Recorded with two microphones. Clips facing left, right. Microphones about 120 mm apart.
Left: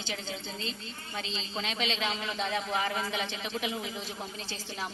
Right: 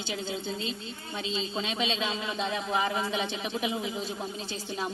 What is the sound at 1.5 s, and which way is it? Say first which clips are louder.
A man's voice: even; 20° right (ahead or behind).